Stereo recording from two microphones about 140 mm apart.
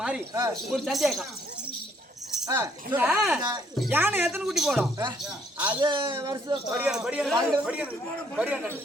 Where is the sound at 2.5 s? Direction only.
15° right (ahead or behind).